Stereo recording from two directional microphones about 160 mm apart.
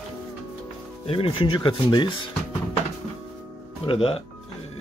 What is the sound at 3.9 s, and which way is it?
Speech, 35° left (ahead or behind).